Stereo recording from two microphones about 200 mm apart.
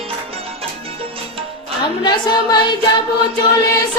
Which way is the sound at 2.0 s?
20° left (ahead or behind).